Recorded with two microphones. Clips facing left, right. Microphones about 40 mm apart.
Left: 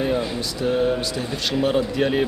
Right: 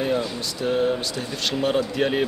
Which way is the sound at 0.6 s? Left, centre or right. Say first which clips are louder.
Left 1 dB; centre.